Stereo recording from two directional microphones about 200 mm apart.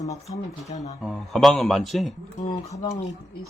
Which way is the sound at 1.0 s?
Centre (ahead or behind).